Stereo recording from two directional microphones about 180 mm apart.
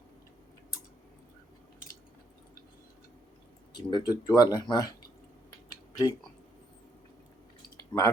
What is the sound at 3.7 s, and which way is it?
Speech, 25° left (ahead or behind).